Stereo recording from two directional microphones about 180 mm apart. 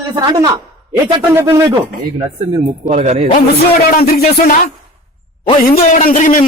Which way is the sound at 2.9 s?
35° right (ahead or behind).